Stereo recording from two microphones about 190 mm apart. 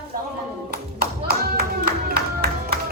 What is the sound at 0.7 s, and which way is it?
Clapping, 55° right (ahead or behind).